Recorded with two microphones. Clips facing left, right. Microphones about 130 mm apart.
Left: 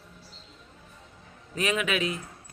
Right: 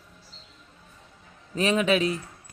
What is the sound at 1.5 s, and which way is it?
Speech, 35° right (ahead or behind).